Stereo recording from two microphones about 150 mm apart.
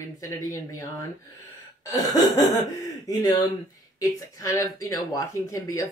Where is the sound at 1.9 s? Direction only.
25° left (ahead or behind).